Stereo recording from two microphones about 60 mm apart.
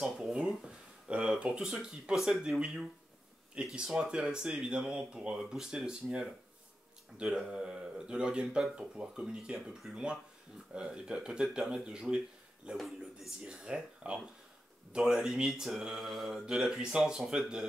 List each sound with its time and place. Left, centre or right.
0.2 s a sound: centre
1.3 s a man's voice: centre
3.5 s speech: centre
7.3 s speech: centre
12.7 s a man's voice: centre
13.5 s speech: centre